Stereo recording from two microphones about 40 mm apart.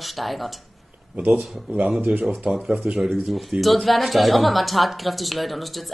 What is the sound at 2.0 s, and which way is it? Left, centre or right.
Speech, right.